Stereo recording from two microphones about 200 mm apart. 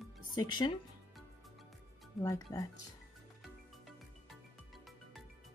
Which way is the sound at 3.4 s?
Centre (ahead or behind).